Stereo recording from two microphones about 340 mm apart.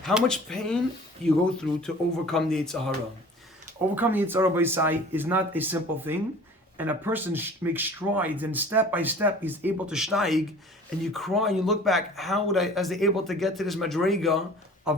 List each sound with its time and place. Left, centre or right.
0.0 s speech: centre
3.9 s speech: centre